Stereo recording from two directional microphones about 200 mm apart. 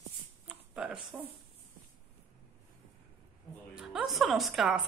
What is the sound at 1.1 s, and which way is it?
Speech, 10° right (ahead or behind).